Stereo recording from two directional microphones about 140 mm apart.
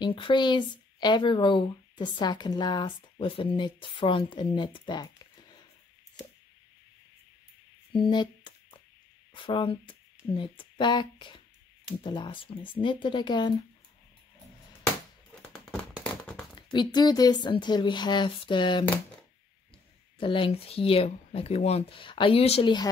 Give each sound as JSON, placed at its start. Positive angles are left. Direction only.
{"t": 0.0, "sound": "speech", "side_deg": 35}
{"t": 7.9, "sound": "a sound", "side_deg": 35}
{"t": 9.3, "sound": "speech", "side_deg": 35}
{"t": 15.5, "sound": "a sound", "side_deg": 10}
{"t": 16.5, "sound": "speech", "side_deg": 30}
{"t": 20.2, "sound": "speech", "side_deg": 40}